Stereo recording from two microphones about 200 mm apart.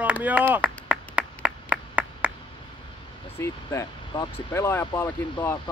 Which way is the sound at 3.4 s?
15° left (ahead or behind).